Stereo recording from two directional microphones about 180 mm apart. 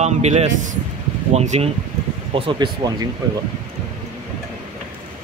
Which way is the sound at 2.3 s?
25° right (ahead or behind).